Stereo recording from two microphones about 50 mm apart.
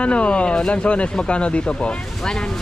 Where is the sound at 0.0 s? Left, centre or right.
Left.